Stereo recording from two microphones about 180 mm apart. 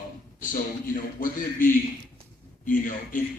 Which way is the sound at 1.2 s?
50° left (ahead or behind).